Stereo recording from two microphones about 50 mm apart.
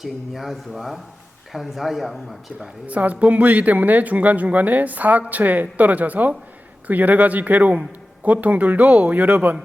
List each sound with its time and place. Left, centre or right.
0.0 s speech: centre
2.8 s a man's voice: right